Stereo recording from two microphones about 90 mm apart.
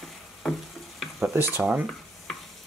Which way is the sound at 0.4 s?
Centre (ahead or behind).